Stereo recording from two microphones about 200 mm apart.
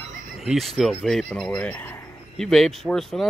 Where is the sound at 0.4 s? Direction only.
Centre (ahead or behind).